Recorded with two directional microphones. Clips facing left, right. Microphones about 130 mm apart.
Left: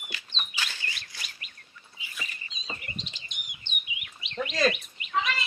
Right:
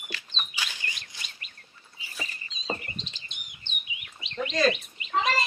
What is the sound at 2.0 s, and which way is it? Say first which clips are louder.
Chirp: right 2 dB; 35° right (ahead or behind).